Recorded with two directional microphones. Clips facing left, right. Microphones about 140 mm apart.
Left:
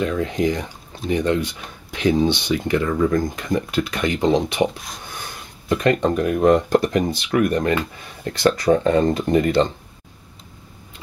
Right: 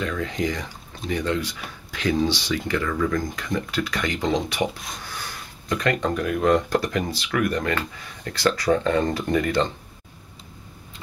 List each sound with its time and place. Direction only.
0.0 s speech: 20° left (ahead or behind)
4.7 s speech: centre (ahead or behind)
5.0 s speech: 20° left (ahead or behind)